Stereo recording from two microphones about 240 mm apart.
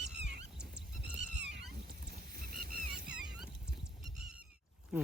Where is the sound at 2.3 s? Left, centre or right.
Right.